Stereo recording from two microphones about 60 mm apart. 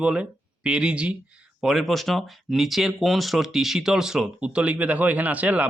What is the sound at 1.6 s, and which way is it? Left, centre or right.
Speech, centre.